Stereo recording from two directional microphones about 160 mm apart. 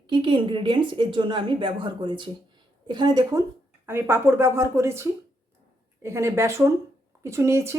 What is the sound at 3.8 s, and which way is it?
Speech, 15° right (ahead or behind).